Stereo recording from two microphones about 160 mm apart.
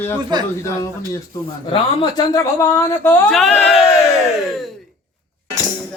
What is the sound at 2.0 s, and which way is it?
Speech, 25° left (ahead or behind).